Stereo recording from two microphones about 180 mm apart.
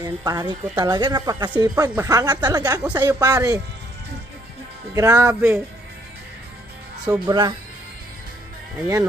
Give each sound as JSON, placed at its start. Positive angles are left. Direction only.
{"t": 0.0, "sound": "a woman's voice", "side_deg": -20}
{"t": 4.9, "sound": "speech", "side_deg": -15}
{"t": 7.1, "sound": "a woman's voice", "side_deg": -25}